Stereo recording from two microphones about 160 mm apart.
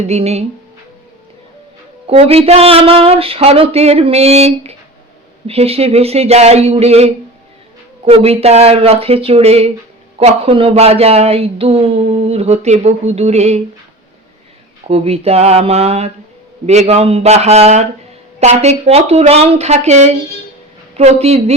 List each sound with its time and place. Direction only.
0.0 s speech: 40° right (ahead or behind)
2.0 s speech: 40° right (ahead or behind)
14.8 s a woman's voice: 40° right (ahead or behind)